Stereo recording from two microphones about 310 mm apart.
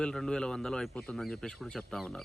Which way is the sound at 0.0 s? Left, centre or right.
Centre.